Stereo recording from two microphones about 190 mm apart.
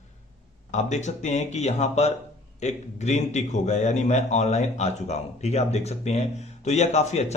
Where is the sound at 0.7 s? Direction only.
40° left (ahead or behind).